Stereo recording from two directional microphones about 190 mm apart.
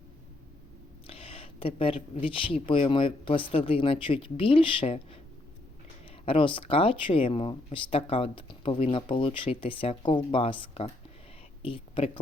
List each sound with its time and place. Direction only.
1.0 s a sound: 30° left (ahead or behind)
2.2 s speech: 25° left (ahead or behind)
6.1 s speech: 30° left (ahead or behind)